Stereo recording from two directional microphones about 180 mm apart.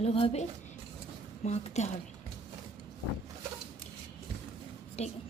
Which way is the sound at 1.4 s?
40° left (ahead or behind).